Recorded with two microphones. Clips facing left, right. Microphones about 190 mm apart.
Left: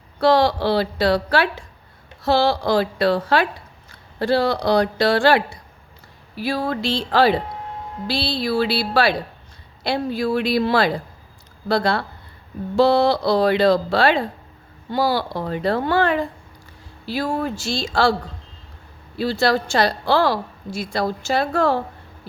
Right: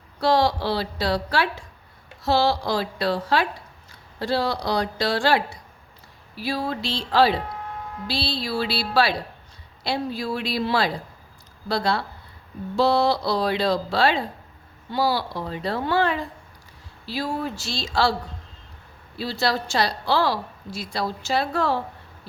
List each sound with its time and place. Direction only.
0.2 s a woman's voice: 60° left (ahead or behind)
19.2 s a woman's voice: 55° left (ahead or behind)